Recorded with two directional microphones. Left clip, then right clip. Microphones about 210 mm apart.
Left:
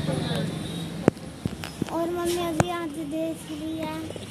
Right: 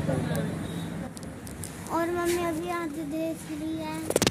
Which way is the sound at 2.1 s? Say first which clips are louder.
Left 2 dB; 5° left (ahead or behind).